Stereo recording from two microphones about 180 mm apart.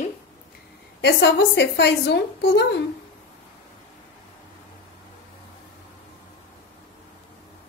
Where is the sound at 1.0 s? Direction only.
70° left (ahead or behind).